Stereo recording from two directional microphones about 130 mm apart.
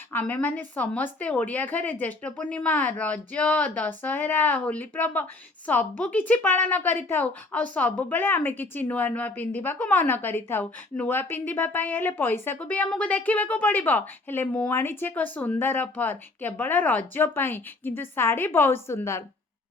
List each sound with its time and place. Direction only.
0.1 s speech: 15° left (ahead or behind)